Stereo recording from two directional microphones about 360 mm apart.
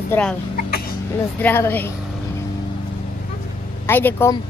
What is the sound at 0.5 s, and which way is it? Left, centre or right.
Cough, left.